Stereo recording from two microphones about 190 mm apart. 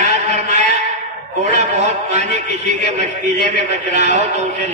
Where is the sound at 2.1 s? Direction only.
40° right (ahead or behind).